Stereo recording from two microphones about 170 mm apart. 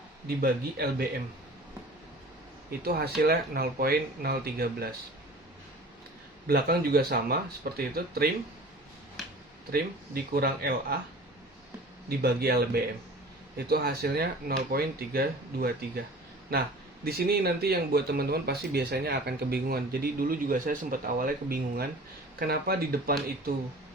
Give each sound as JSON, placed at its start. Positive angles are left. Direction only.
{"t": 0.3, "sound": "speech", "side_deg": -65}
{"t": 2.6, "sound": "speech", "side_deg": -65}
{"t": 6.5, "sound": "speech", "side_deg": -65}
{"t": 10.3, "sound": "speech", "side_deg": -65}
{"t": 12.0, "sound": "speech", "side_deg": -65}